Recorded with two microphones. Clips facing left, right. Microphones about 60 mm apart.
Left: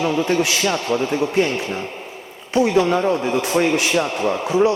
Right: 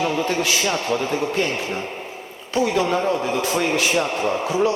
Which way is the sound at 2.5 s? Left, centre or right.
Left.